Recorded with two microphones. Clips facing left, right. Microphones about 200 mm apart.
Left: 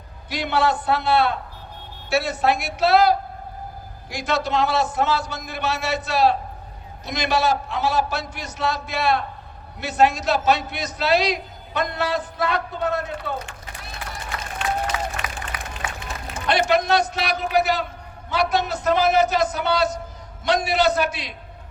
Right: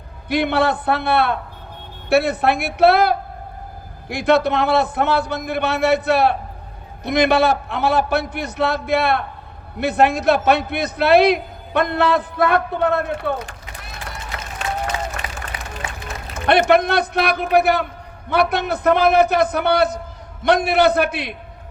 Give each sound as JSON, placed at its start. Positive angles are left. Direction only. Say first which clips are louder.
{"t": 0.3, "sound": "a man's voice", "louder": "right 4 dB", "side_deg": -60}
{"t": 14.9, "sound": "applause", "louder": "right 1 dB", "side_deg": -25}
{"t": 16.0, "sound": "a man's voice", "louder": "right 6 dB", "side_deg": -55}